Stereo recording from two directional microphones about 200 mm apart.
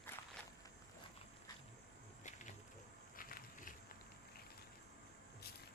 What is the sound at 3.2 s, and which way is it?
Walk, 45° left (ahead or behind).